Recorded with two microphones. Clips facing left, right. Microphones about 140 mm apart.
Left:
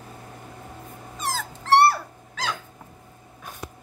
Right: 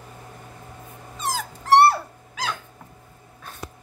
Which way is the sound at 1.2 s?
15° right (ahead or behind).